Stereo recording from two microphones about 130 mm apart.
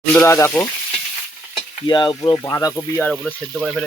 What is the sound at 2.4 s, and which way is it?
Speech, 25° left (ahead or behind).